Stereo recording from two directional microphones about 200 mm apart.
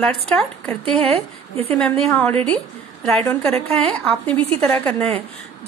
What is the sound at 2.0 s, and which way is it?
Speech, 5° left (ahead or behind).